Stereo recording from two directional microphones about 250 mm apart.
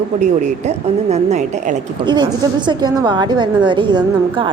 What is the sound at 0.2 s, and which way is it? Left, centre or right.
Speech, right.